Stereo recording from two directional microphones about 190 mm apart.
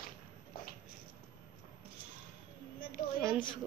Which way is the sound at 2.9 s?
Centre (ahead or behind).